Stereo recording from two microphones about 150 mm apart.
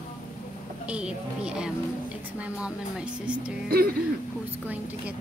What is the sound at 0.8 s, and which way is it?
Speech, 5° right (ahead or behind).